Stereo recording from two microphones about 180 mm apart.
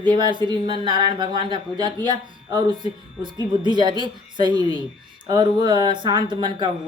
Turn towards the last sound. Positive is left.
turn(degrees=-25)  # may be behind; listen again after turning